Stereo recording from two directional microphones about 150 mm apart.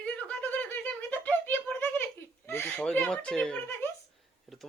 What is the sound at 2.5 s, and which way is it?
Speech, 15° left (ahead or behind).